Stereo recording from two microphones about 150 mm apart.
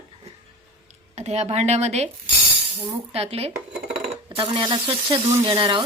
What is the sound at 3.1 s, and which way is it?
Sizzle, 40° right (ahead or behind).